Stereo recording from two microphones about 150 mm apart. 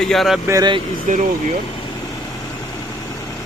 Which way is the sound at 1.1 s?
55° right (ahead or behind).